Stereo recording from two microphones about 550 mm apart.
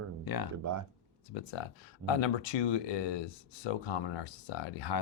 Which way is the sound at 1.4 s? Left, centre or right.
Left.